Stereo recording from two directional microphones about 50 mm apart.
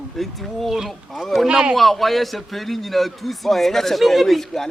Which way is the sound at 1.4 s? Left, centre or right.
Centre.